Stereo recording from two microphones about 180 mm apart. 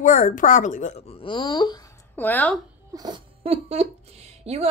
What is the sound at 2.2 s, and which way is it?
Speech, 10° left (ahead or behind).